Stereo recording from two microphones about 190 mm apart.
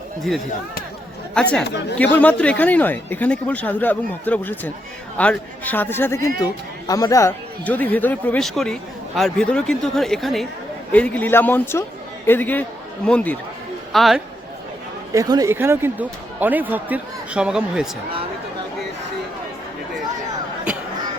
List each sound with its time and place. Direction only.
1.3 s speech: 5° left (ahead or behind)
1.6 s speech: 65° left (ahead or behind)
2.1 s a man's voice: 5° left (ahead or behind)
15.1 s speech: 20° right (ahead or behind)